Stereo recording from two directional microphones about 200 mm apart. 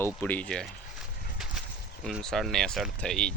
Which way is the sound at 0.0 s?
10° left (ahead or behind).